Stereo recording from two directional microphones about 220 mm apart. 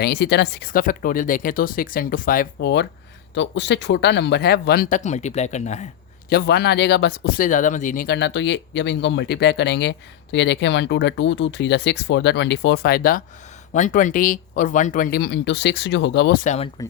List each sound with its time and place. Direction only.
0.0 s speech: 50° left (ahead or behind); by 5.9 s 30° left (ahead or behind)
6.3 s speech: 50° left (ahead or behind)